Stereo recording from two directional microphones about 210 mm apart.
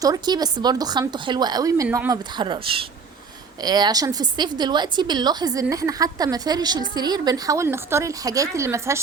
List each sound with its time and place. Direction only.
0.0 s a woman's voice: 20° right (ahead or behind)